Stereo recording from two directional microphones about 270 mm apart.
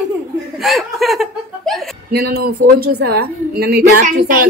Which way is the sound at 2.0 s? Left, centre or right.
Right.